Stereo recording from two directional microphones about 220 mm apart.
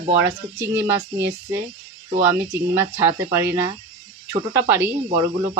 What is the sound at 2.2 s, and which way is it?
Speech, 10° right (ahead or behind).